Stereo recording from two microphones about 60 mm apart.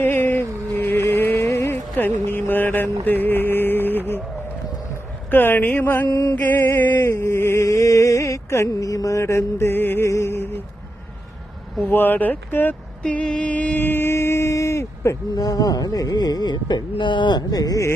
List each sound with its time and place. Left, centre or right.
0.0 s music: left
2.0 s music: left
5.3 s speech: left
6.1 s speech: left
6.3 s speech: left
7.1 s a sound: left
10.1 s a sound: left
11.8 s speech: left
13.0 s mantra: centre
13.7 s a sound: left
15.4 s speech: left
17.5 s speech: left